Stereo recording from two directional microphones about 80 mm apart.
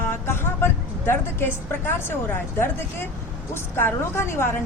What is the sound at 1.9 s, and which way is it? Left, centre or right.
A woman's voice, left.